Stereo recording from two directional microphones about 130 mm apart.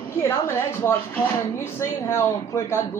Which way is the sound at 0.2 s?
20° left (ahead or behind).